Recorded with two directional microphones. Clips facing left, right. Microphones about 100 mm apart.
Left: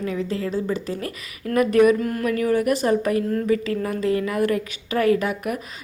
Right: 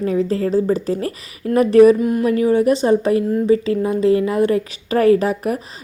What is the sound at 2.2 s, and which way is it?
A woman's voice, 30° right (ahead or behind).